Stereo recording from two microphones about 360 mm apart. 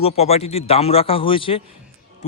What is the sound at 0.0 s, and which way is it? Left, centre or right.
Speech, centre.